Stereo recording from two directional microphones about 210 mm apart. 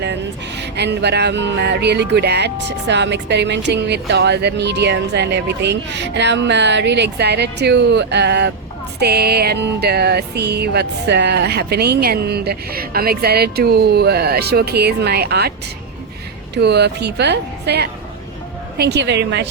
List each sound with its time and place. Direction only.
0.0 s speech: 55° right (ahead or behind)
9.0 s music: 50° right (ahead or behind)
16.6 s music: 50° right (ahead or behind)
18.8 s speech: 55° right (ahead or behind)